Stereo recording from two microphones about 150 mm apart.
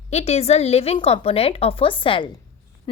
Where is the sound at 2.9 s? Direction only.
35° left (ahead or behind).